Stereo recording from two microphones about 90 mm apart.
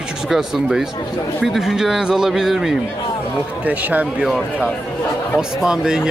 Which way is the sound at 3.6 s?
15° right (ahead or behind).